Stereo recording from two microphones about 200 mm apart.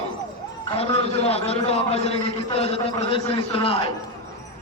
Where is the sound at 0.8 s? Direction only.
30° left (ahead or behind).